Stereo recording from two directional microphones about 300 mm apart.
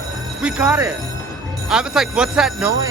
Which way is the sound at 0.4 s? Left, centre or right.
Centre.